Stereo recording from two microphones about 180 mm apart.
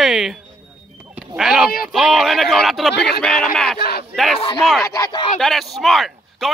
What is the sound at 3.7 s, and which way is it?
Speech, 60° left (ahead or behind).